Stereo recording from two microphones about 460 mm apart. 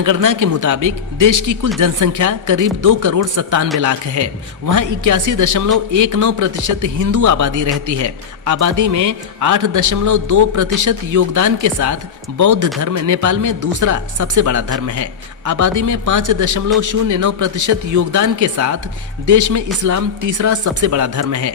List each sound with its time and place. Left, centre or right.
0.0 s speech: right